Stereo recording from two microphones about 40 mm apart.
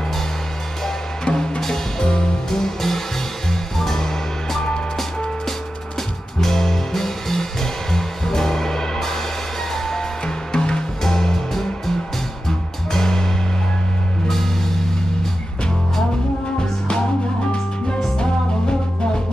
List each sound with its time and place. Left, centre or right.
0.8 s music: centre
6.4 s music: centre
10.2 s music: left
18.1 s music: centre